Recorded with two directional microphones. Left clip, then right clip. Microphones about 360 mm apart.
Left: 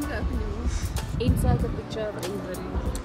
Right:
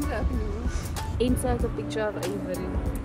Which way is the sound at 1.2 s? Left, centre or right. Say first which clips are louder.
Right 4 dB; centre.